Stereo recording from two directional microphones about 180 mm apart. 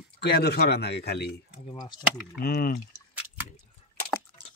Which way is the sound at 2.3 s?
55° left (ahead or behind).